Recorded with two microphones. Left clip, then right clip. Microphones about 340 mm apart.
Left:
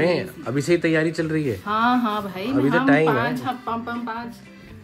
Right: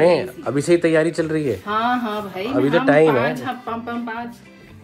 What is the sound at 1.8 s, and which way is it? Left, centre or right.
Speech, left.